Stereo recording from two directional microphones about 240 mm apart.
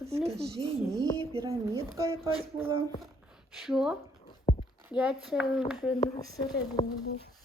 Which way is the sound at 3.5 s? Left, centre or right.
Centre.